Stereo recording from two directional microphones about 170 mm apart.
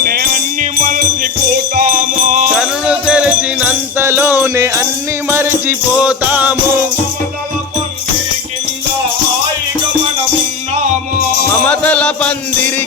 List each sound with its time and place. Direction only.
0.0 s music: 65° right (ahead or behind)
2.6 s music: 5° right (ahead or behind)
11.5 s music: 10° left (ahead or behind)